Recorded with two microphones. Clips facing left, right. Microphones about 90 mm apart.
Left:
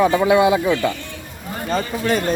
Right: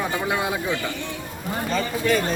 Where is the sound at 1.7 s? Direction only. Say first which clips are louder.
Left 3 dB; 40° left (ahead or behind).